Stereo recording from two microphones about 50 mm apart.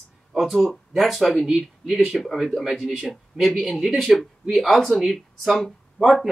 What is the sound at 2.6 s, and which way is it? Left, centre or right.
Speech, centre.